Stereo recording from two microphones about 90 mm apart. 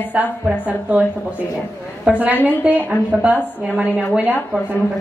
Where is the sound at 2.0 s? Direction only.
15° right (ahead or behind).